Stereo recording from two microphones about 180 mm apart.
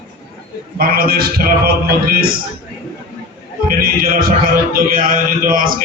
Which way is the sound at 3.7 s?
50° right (ahead or behind).